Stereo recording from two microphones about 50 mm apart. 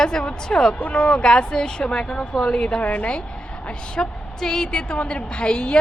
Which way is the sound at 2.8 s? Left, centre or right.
Left.